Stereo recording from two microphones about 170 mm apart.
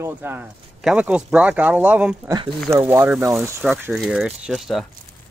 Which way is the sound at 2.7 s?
15° right (ahead or behind).